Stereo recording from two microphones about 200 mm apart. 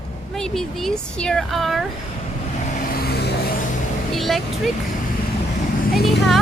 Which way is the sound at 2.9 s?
50° left (ahead or behind).